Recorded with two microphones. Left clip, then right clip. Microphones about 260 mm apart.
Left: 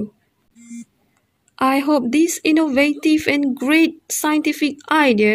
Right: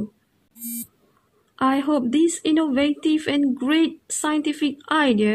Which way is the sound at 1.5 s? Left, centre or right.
Left.